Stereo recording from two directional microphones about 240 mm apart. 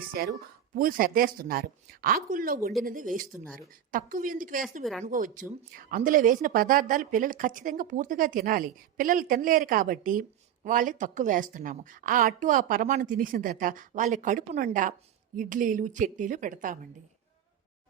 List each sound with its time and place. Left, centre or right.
0.1 s speech: right
4.8 s speech: centre
5.0 s speech: right